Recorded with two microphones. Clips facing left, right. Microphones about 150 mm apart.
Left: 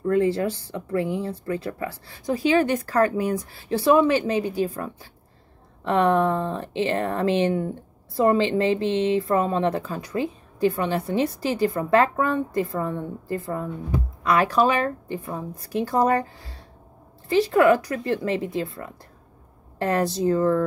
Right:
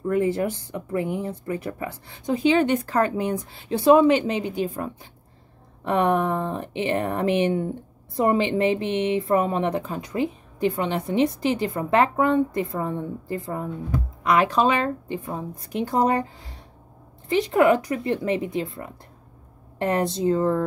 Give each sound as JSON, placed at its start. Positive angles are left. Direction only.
{"t": 0.0, "sound": "a woman's voice", "side_deg": -15}
{"t": 8.8, "sound": "a sound", "side_deg": 30}
{"t": 9.3, "sound": "a woman's voice", "side_deg": -15}